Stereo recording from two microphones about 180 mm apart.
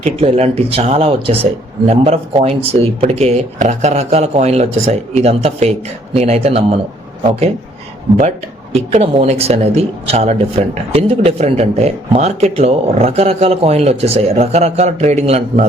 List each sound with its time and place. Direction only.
0.0 s a man's voice: 35° right (ahead or behind)
8.7 s a man's voice: 35° right (ahead or behind)